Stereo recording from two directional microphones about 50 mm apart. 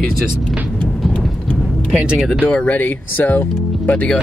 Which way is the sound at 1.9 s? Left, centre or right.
Right.